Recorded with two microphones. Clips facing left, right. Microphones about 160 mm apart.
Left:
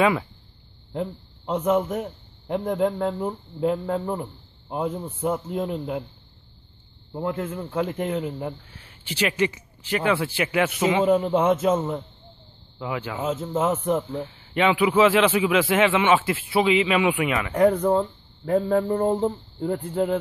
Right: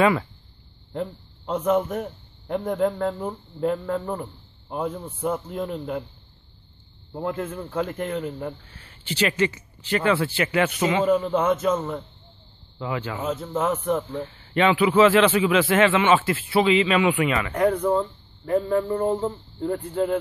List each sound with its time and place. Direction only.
0.0 s a man's voice: 5° left (ahead or behind)
7.2 s a man's voice: 15° left (ahead or behind)
11.1 s speech: 25° left (ahead or behind)
12.7 s a man's voice: 10° left (ahead or behind)
13.2 s speech: 25° left (ahead or behind)
14.1 s a man's voice: 10° left (ahead or behind)
17.6 s speech: 35° left (ahead or behind)